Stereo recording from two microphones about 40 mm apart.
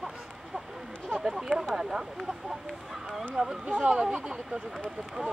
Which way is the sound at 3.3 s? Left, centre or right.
Centre.